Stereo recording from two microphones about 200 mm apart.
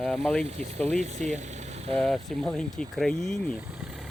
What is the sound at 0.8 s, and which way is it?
Speech, 35° right (ahead or behind).